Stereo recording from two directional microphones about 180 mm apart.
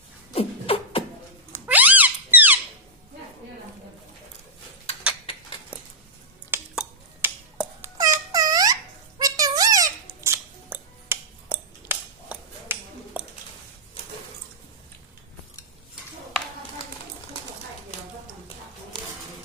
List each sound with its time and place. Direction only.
0.3 s beatboxing: 30° left (ahead or behind)
1.5 s cat: 10° right (ahead or behind)
6.5 s a sound: 10° right (ahead or behind)